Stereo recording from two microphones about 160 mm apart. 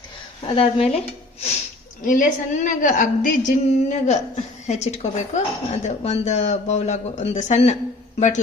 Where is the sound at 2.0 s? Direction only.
55° left (ahead or behind).